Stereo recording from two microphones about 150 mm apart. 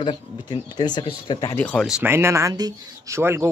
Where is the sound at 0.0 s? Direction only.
30° left (ahead or behind).